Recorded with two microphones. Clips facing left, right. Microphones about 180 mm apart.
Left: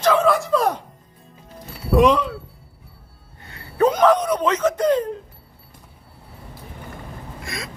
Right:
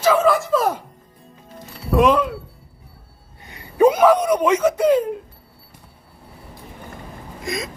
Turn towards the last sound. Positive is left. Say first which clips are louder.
# right 6 dB
turn(degrees=-20)  # may be behind; listen again after turning